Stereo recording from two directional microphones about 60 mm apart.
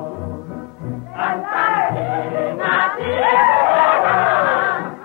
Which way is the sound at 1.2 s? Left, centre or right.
Right.